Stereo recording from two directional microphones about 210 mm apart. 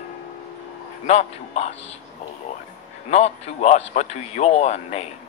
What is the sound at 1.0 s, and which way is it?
Speech, 30° left (ahead or behind).